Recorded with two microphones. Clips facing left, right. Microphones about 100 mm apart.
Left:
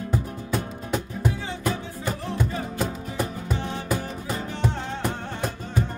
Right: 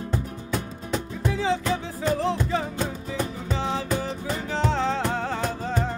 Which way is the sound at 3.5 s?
90° right.